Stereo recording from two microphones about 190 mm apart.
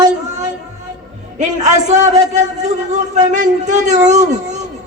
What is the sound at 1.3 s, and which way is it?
A man's voice, 40° right (ahead or behind).